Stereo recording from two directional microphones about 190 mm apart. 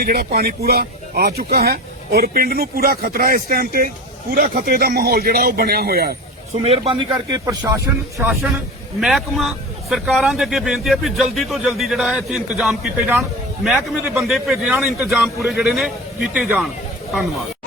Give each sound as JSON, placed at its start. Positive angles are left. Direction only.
{"t": 0.0, "sound": "speech", "side_deg": -50}
{"t": 6.5, "sound": "speech", "side_deg": -30}
{"t": 9.0, "sound": "a man's voice", "side_deg": 0}